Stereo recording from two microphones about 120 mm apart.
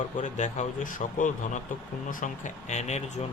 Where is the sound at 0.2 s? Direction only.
80° left.